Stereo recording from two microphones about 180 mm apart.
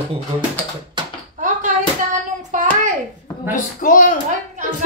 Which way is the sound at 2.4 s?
45° right (ahead or behind).